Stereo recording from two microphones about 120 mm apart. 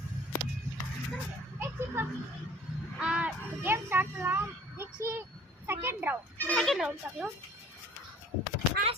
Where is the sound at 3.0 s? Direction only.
10° right (ahead or behind).